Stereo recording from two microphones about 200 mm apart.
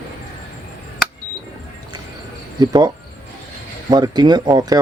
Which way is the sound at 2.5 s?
20° right (ahead or behind).